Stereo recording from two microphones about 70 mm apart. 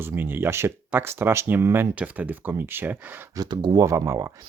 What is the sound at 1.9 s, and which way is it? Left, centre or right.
Speech, right.